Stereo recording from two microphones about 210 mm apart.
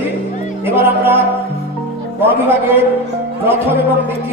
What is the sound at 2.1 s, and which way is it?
Speech, 10° right (ahead or behind).